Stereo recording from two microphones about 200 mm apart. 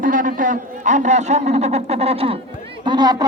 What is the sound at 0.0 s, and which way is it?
A man's voice, 40° right (ahead or behind).